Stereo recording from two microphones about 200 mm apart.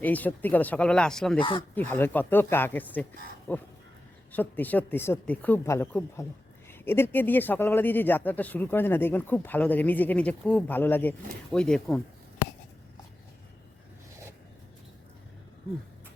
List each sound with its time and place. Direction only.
0.0 s speech: 10° left (ahead or behind)
1.4 s speech: 25° left (ahead or behind)
1.7 s speech: 10° left (ahead or behind)